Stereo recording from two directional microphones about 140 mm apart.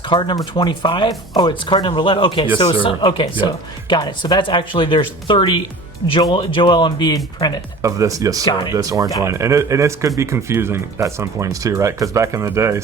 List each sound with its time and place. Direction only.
0.1 s speech: 35° left (ahead or behind)
7.8 s speech: 25° right (ahead or behind)